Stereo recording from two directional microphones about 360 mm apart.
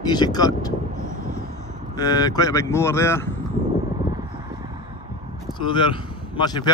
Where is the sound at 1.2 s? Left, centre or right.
Right.